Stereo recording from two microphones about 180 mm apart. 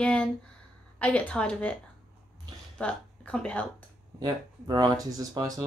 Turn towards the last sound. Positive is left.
turn(degrees=-20)  # may be behind; listen again after turning